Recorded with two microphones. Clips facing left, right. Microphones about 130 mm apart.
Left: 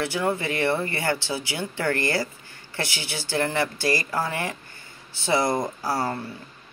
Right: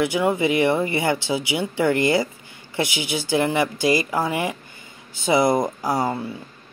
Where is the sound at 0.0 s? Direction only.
15° right (ahead or behind).